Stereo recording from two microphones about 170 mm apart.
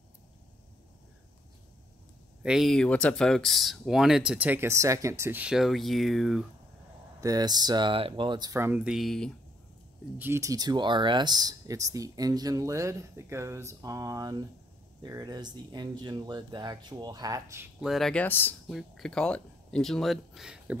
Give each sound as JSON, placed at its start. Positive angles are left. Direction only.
{"t": 2.4, "sound": "speech", "side_deg": 0}
{"t": 7.2, "sound": "speech", "side_deg": -20}
{"t": 10.1, "sound": "speech", "side_deg": -15}
{"t": 17.7, "sound": "speech", "side_deg": 0}
{"t": 18.7, "sound": "speech", "side_deg": 0}